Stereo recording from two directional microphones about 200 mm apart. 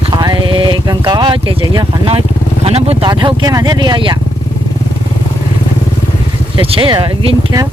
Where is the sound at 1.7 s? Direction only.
25° right (ahead or behind).